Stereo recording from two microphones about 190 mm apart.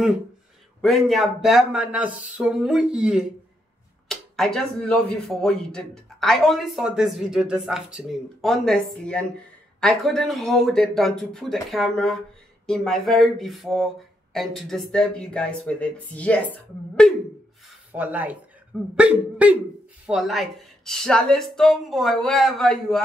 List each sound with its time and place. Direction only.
0.7 s speech: centre (ahead or behind)
17.9 s speech: 10° right (ahead or behind)